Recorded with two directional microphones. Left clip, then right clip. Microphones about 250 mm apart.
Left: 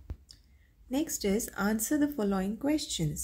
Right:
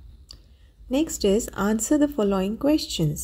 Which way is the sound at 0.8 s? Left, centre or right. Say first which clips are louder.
Right 9 dB; centre.